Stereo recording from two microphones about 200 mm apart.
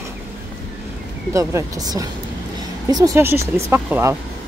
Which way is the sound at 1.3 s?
15° right (ahead or behind).